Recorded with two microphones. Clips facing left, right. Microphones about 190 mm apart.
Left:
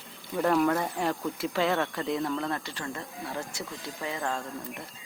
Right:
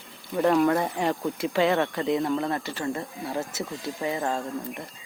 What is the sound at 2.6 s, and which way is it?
Speech, 5° right (ahead or behind).